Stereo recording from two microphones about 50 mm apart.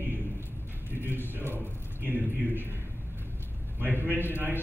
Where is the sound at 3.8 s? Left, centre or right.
Right.